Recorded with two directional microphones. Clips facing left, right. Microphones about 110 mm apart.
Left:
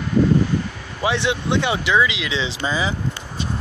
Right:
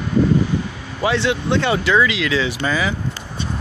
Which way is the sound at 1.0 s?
15° left (ahead or behind).